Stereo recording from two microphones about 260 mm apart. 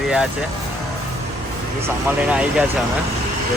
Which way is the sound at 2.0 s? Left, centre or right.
Centre.